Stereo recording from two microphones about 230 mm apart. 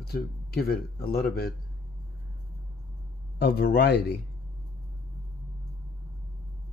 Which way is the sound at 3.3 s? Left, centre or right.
Left.